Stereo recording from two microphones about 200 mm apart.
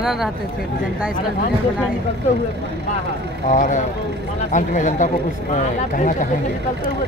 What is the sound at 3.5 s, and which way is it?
Speech, 40° left (ahead or behind).